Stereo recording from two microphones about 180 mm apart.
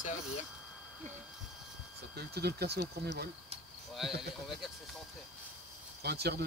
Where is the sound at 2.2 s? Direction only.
60° right (ahead or behind).